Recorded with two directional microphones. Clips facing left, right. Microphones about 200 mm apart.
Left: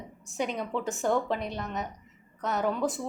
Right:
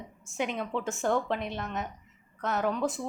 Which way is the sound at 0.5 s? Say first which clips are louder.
Left 1 dB; 15° left (ahead or behind).